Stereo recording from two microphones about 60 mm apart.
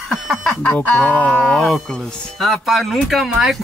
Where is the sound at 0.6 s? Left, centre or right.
Left.